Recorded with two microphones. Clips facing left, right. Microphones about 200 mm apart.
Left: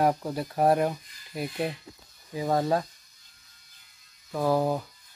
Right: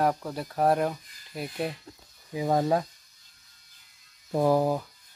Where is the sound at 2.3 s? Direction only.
10° right (ahead or behind).